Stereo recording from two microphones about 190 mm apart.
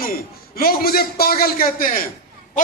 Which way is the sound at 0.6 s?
50° left (ahead or behind).